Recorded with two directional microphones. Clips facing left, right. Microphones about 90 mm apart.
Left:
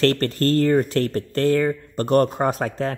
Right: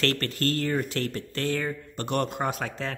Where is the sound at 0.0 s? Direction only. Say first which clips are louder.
Left 8 dB; 35° left (ahead or behind).